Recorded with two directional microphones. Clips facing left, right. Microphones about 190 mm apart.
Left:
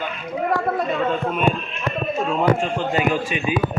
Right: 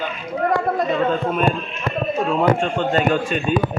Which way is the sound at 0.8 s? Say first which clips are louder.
Right 2 dB; centre (ahead or behind).